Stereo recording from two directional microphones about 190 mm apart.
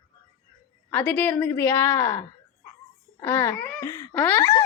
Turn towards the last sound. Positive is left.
turn(degrees=15)  # may be behind; listen again after turning